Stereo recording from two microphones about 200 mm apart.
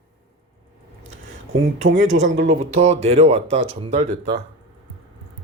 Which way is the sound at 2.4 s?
35° right (ahead or behind).